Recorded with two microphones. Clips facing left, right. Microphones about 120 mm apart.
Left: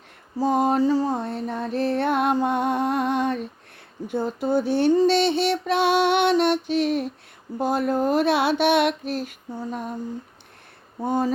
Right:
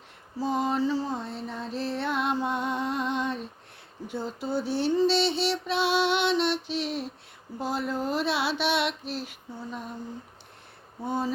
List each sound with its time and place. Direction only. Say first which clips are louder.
0.3 s mantra: left 6 dB; 50° left (ahead or behind)
11.0 s mantra: left 6 dB; 45° left (ahead or behind)